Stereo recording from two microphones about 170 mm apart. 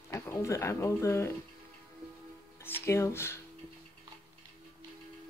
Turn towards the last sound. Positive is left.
turn(degrees=15)  # may be behind; listen again after turning